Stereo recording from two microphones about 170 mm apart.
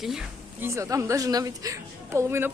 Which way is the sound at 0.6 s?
15° right (ahead or behind).